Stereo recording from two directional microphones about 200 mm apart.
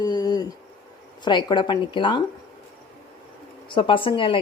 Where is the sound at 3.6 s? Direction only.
25° left (ahead or behind).